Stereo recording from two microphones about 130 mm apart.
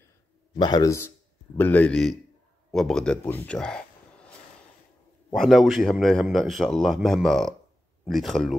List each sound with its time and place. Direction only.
0.6 s a man's voice: 35° left (ahead or behind)
1.6 s speech: 15° left (ahead or behind)
5.3 s a man's voice: centre (ahead or behind)